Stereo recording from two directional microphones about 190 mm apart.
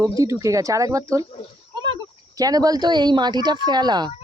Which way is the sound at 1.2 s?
30° left (ahead or behind).